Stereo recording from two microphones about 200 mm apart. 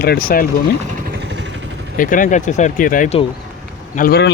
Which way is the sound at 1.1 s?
60° right (ahead or behind).